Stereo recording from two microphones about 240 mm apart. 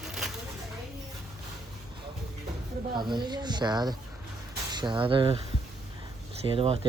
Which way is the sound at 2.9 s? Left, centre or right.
Centre.